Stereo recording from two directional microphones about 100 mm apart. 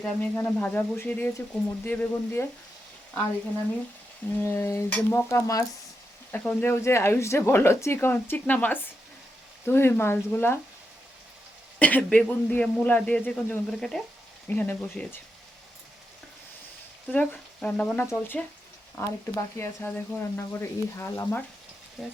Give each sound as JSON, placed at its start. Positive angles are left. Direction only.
{"t": 0.0, "sound": "a man's voice", "side_deg": 15}
{"t": 4.4, "sound": "speech", "side_deg": 25}
{"t": 6.3, "sound": "a man's voice", "side_deg": 15}
{"t": 6.8, "sound": "speech", "side_deg": 25}
{"t": 11.8, "sound": "a man's voice", "side_deg": 15}
{"t": 13.7, "sound": "frying", "side_deg": 5}
{"t": 14.4, "sound": "a man's voice", "side_deg": 15}
{"t": 17.1, "sound": "speech", "side_deg": 15}
{"t": 22.0, "sound": "frying", "side_deg": 5}